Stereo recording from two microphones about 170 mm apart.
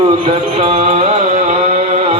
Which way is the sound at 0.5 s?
40° right (ahead or behind).